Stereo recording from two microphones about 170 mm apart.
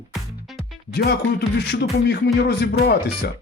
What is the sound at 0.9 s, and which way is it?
Speech, 75° left (ahead or behind).